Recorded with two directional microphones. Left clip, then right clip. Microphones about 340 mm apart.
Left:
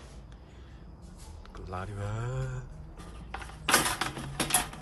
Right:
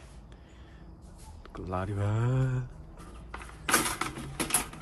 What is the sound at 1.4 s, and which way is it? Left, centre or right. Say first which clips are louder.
Speech: right 5 dB; centre.